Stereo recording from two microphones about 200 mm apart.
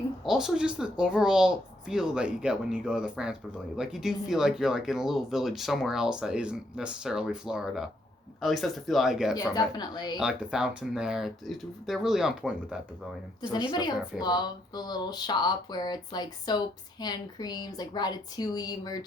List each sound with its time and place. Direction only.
0.3 s speech: 5° right (ahead or behind)
9.3 s speech: 20° left (ahead or behind)
10.2 s speech: 5° right (ahead or behind)
13.5 s speech: 20° left (ahead or behind)